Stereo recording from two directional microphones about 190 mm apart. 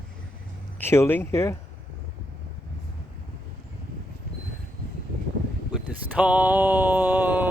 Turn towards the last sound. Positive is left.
turn(degrees=-10)  # may be behind; listen again after turning